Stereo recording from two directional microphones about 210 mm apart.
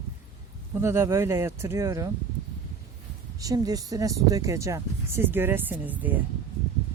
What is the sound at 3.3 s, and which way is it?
Speech, 15° right (ahead or behind).